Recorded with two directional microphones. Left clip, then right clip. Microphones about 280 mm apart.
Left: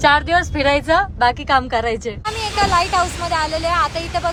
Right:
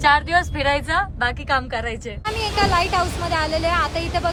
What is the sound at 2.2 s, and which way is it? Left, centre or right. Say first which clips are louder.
Speech: left 1 dB; centre.